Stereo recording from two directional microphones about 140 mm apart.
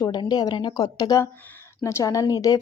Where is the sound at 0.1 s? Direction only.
30° left (ahead or behind).